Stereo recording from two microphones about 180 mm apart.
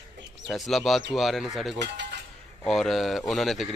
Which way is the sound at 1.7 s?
75° right (ahead or behind).